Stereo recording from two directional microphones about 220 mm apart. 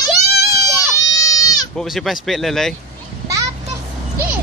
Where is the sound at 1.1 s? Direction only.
15° left (ahead or behind).